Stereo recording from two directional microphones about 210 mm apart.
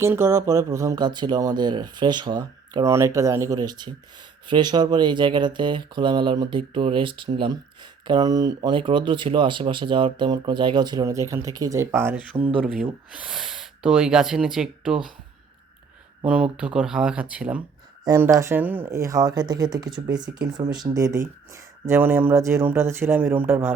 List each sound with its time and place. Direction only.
0.0 s speech: 10° right (ahead or behind)
16.2 s speech: 5° right (ahead or behind)